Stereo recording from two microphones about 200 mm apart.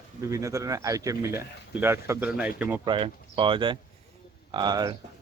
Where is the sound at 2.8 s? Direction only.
25° right (ahead or behind).